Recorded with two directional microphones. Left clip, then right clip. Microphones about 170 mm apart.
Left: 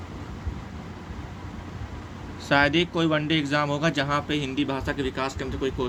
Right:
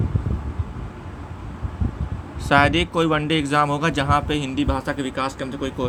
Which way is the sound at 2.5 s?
30° right (ahead or behind).